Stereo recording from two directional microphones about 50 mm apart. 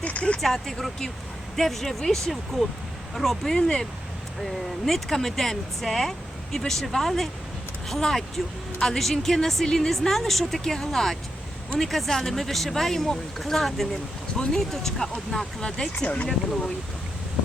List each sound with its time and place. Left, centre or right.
0.0 s a sound: left
0.4 s a woman's voice: centre
16.0 s speech: left